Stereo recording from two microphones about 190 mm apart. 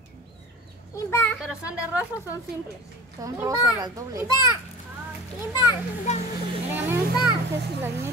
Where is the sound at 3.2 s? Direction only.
20° right (ahead or behind).